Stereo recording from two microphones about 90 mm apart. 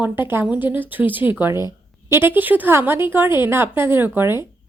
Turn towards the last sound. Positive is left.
turn(degrees=-25)  # may be behind; listen again after turning